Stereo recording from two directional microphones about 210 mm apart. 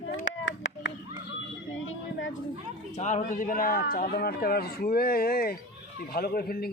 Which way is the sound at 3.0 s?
35° left (ahead or behind).